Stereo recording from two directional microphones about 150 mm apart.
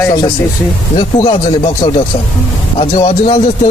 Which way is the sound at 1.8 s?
35° left (ahead or behind).